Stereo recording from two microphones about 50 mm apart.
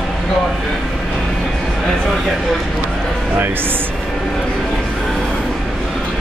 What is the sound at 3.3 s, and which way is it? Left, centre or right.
Speech, right.